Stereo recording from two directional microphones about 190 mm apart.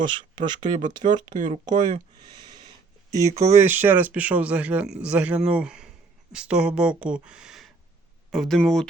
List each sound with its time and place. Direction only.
0.0 s speech: 25° right (ahead or behind)
1.3 s speech: 40° right (ahead or behind)
1.6 s speech: 25° right (ahead or behind)
2.4 s wheeze: 20° right (ahead or behind)
3.1 s speech: 15° right (ahead or behind); by 8.9 s 5° left (ahead or behind)